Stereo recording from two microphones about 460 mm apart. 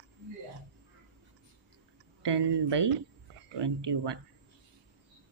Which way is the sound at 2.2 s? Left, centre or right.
Right.